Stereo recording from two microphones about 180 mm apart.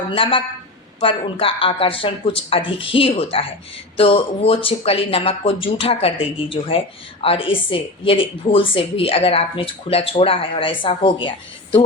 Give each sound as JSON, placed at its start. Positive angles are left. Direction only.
{"t": 0.1, "sound": "speech", "side_deg": 30}